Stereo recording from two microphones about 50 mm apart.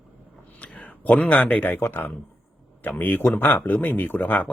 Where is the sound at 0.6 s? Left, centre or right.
Left.